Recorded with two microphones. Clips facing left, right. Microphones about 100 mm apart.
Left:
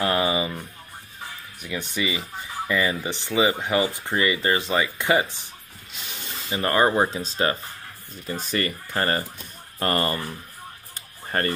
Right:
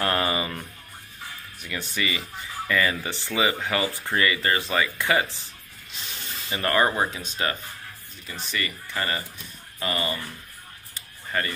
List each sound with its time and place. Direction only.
0.0 s music: 10° left (ahead or behind)
1.6 s speech: 15° left (ahead or behind); by 7.5 s 35° left (ahead or behind)
8.3 s speech: 45° left (ahead or behind)
11.0 s a sound: 50° left (ahead or behind)